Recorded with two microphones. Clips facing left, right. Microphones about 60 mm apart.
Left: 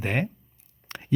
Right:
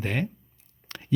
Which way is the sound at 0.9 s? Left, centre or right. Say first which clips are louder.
Left 2 dB; left.